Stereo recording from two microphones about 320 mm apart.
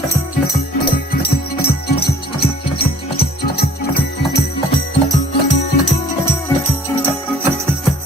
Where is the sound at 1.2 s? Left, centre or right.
Left.